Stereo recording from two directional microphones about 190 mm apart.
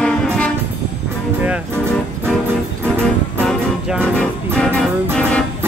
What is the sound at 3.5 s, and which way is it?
Music, centre (ahead or behind).